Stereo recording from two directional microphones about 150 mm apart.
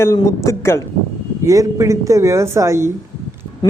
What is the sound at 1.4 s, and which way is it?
A woman's voice, 20° right (ahead or behind).